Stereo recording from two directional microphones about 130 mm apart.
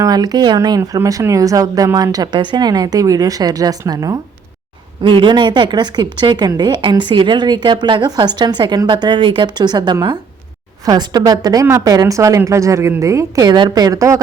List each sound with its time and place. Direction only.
0.0 s a woman's voice: 30° right (ahead or behind)